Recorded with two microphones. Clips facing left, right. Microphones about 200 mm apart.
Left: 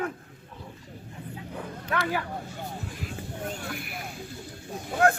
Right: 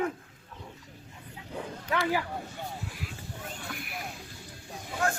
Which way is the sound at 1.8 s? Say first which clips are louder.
Even; 15° right (ahead or behind).